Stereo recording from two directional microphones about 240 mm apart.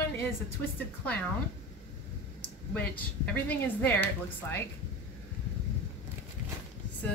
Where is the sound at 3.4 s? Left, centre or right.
Centre.